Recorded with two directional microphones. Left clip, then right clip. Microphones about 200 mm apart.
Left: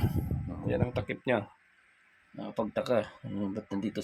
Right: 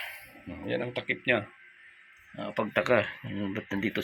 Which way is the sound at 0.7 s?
20° left (ahead or behind).